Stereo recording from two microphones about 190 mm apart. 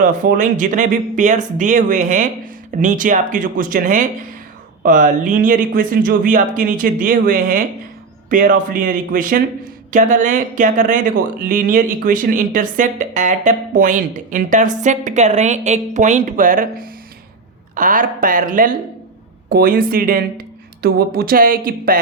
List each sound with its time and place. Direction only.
0.0 s speech: 45° right (ahead or behind)